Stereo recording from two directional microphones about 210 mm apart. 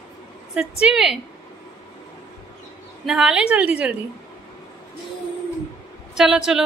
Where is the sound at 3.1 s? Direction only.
5° right (ahead or behind).